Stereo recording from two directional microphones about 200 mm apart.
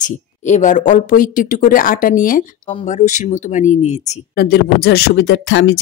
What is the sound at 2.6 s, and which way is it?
Speech, 30° left (ahead or behind).